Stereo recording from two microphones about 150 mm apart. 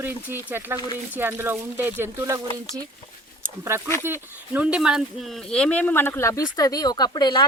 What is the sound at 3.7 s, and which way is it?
Speech, 15° right (ahead or behind).